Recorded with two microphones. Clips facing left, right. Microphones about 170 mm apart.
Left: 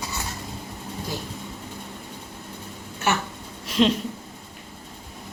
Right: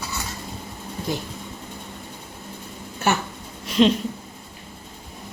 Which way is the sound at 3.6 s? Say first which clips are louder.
Right 3 dB; centre (ahead or behind).